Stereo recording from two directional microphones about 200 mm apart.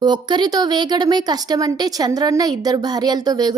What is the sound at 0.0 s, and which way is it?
A woman's voice, 20° right (ahead or behind).